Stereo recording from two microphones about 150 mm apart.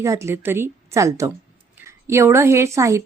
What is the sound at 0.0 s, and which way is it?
A woman's voice, 20° right (ahead or behind).